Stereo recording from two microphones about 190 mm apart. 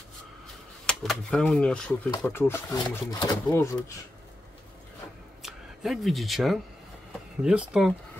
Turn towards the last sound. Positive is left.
turn(degrees=-5)  # may be behind; listen again after turning